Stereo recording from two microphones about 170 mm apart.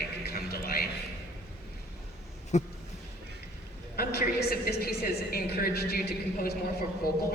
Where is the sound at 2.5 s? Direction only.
45° left (ahead or behind).